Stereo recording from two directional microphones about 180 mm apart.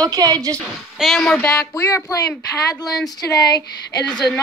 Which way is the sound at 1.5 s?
20° left (ahead or behind).